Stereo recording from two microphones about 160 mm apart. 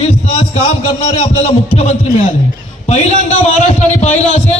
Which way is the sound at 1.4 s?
40° left (ahead or behind).